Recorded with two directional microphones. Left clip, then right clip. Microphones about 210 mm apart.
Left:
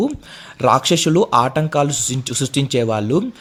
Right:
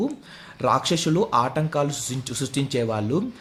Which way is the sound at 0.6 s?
35° left (ahead or behind).